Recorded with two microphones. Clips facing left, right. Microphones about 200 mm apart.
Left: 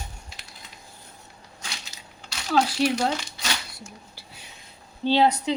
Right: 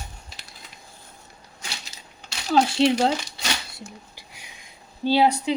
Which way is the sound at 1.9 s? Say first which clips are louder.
Even; 30° right (ahead or behind).